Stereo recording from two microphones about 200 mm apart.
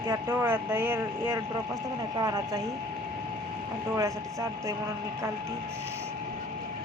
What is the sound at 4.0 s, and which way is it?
Speech, 15° right (ahead or behind).